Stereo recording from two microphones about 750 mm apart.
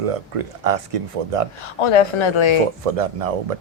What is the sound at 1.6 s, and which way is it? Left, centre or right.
Speech, left.